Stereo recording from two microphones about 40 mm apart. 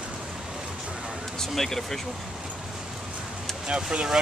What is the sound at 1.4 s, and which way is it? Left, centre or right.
Speech, centre.